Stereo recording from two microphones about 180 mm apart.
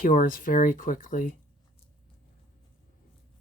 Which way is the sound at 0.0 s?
50° left (ahead or behind).